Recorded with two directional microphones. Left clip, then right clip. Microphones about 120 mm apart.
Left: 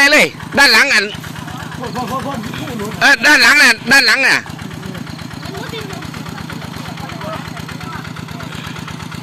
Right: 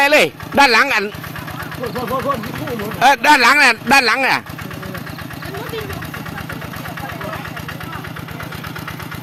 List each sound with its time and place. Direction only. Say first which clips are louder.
0.0 s speech: left 3 dB; 15° right (ahead or behind)
3.0 s speech: left 2 dB; 20° right (ahead or behind)